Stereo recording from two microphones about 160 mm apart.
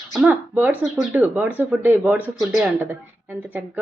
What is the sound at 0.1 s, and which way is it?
Speech, 10° right (ahead or behind).